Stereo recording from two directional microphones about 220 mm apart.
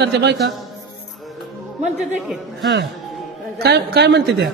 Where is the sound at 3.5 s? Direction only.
45° right (ahead or behind).